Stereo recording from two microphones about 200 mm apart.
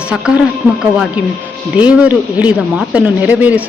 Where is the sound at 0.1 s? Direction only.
5° right (ahead or behind).